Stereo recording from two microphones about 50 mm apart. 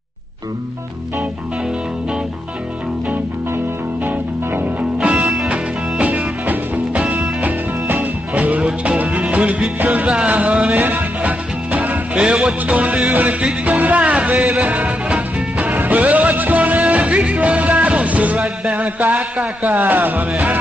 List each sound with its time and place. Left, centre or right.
4.0 s music: right
5.0 s music: centre
5.9 s music: right
8.8 s music: right
10.8 s music: right
12.2 s music: centre
15.7 s music: right
19.8 s music: right